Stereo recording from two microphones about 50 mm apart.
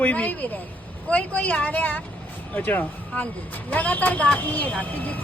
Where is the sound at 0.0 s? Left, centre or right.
Left.